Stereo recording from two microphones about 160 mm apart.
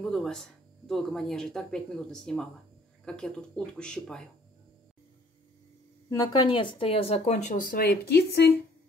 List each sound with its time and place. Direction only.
0.0 s speech: centre (ahead or behind)
6.0 s speech: 25° left (ahead or behind); by 8.5 s 90° left